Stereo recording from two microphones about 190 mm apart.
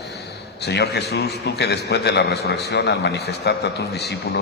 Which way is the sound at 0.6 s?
60° left (ahead or behind).